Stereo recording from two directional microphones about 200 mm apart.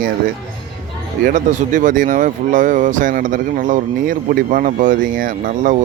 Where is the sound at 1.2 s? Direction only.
40° right (ahead or behind).